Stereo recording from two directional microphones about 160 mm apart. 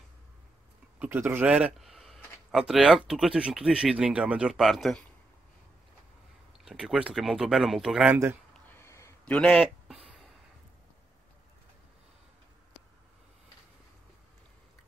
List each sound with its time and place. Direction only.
0.9 s speech: 10° right (ahead or behind)
6.6 s speech: 5° right (ahead or behind)
8.6 s a sound: 15° left (ahead or behind)
9.2 s a man's voice: 5° left (ahead or behind)